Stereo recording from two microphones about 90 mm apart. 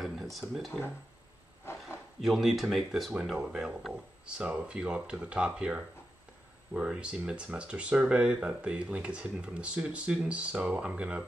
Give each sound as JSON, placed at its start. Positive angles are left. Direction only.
{"t": 0.0, "sound": "speech", "side_deg": 0}
{"t": 1.7, "sound": "a sound", "side_deg": 30}
{"t": 2.2, "sound": "speech", "side_deg": 0}